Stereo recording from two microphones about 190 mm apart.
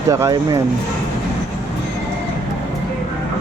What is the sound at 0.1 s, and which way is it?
Speech, 15° right (ahead or behind).